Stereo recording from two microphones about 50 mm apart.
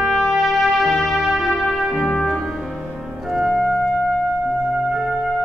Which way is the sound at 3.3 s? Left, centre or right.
Centre.